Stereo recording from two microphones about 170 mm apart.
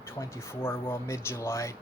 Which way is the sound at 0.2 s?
15° left (ahead or behind).